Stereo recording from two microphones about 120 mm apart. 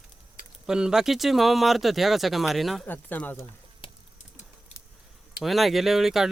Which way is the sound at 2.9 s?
15° left (ahead or behind).